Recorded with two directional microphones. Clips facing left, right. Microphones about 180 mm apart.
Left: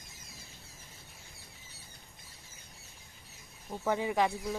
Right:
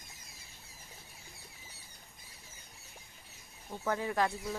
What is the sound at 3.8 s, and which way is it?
Speech, 15° left (ahead or behind).